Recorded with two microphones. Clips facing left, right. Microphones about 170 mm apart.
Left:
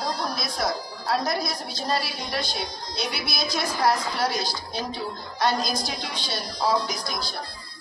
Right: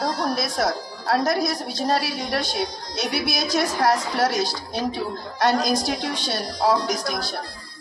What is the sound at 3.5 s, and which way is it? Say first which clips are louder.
Speech: right 3 dB; 80° right.